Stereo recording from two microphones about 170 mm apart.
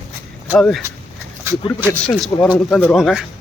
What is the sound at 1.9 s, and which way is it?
A man's voice, 10° left (ahead or behind).